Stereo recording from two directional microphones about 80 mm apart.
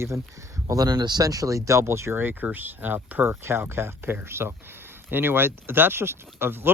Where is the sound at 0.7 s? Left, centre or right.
Right.